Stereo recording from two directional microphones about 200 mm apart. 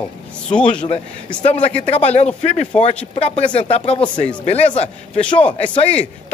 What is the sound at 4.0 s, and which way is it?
Speech, 5° left (ahead or behind).